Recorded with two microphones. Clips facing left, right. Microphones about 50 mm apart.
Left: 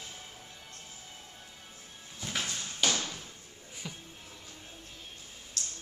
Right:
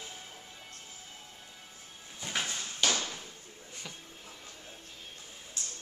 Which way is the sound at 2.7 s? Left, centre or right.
Centre.